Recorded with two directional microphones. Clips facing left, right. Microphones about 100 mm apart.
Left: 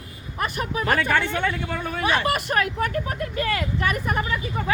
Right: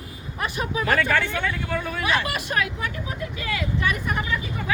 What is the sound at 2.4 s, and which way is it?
Speech, 45° left (ahead or behind).